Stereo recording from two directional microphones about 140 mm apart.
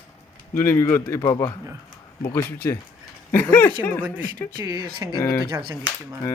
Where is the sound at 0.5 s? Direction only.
15° left (ahead or behind).